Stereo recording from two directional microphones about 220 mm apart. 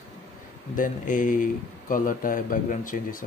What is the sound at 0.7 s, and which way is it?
Speech, 35° left (ahead or behind).